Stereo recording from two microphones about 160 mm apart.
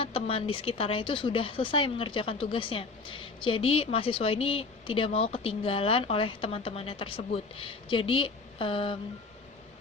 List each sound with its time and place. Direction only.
0.0 s speech: 35° left (ahead or behind)